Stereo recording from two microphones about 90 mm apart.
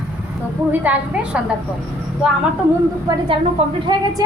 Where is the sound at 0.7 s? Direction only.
20° right (ahead or behind).